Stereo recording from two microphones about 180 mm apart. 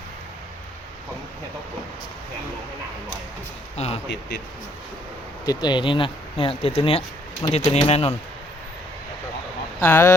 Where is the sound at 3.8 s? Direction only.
35° left (ahead or behind).